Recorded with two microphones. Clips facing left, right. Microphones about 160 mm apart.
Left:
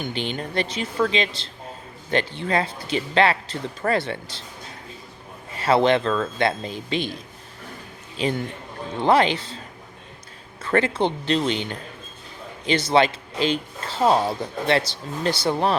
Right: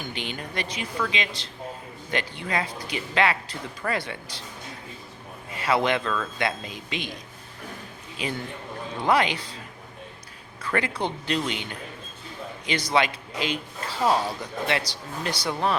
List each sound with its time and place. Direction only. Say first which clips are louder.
0.0 s speech: left 6 dB; 30° left (ahead or behind)
5.5 s speech: left 5 dB; 30° left (ahead or behind)
8.2 s speech: left 6 dB; 30° left (ahead or behind)
10.6 s speech: left 6 dB; 25° left (ahead or behind)